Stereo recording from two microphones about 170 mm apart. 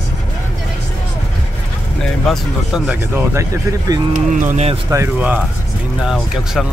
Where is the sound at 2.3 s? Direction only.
Centre (ahead or behind).